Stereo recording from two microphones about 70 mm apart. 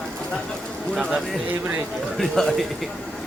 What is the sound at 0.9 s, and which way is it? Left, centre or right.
Bird, centre.